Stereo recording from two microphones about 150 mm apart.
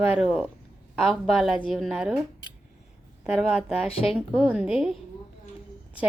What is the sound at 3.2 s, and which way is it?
Speech, 5° right (ahead or behind).